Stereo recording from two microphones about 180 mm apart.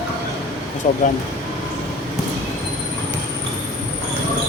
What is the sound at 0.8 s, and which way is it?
Speech, 45° left (ahead or behind).